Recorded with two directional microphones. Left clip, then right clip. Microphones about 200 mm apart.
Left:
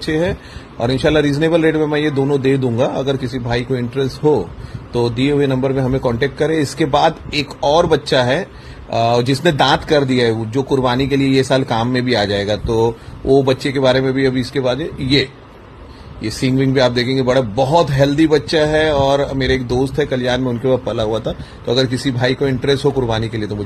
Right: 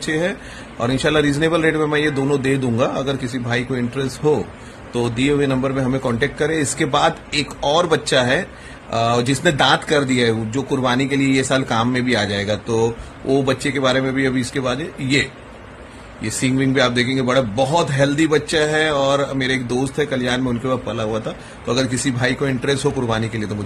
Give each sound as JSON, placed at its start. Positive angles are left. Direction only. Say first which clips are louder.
{"t": 0.0, "sound": "speech", "louder": "left 3 dB", "side_deg": 15}
{"t": 20.9, "sound": "a man's voice", "louder": "left 4 dB", "side_deg": 25}
{"t": 21.6, "sound": "speech", "louder": "left 3 dB", "side_deg": 15}